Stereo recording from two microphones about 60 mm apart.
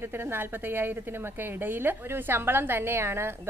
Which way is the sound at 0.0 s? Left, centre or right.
Right.